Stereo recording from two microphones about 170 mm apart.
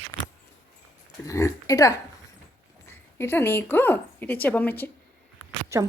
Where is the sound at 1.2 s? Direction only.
20° left (ahead or behind).